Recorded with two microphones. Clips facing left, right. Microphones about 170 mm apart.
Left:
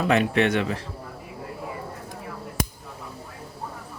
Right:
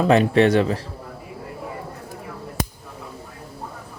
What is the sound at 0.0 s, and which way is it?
Speech, 35° right (ahead or behind).